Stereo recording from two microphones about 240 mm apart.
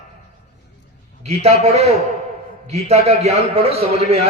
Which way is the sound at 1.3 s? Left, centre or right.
Right.